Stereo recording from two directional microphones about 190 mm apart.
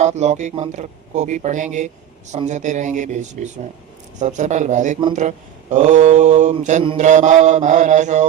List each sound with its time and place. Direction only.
0.0 s mantra: 35° right (ahead or behind)